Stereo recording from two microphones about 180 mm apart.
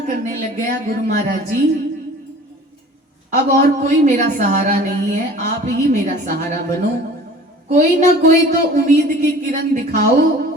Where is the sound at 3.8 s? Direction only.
45° right (ahead or behind).